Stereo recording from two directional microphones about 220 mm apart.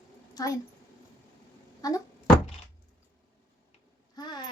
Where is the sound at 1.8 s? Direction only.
15° left (ahead or behind).